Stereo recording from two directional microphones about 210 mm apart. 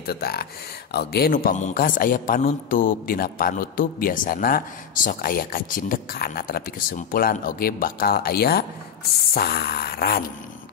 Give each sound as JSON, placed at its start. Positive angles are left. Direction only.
{"t": 0.0, "sound": "speech", "side_deg": 50}